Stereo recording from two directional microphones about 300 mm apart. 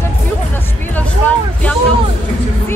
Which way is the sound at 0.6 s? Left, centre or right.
Centre.